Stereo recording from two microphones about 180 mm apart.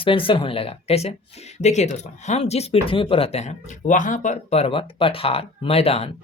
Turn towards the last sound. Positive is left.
turn(degrees=35)  # may be behind; listen again after turning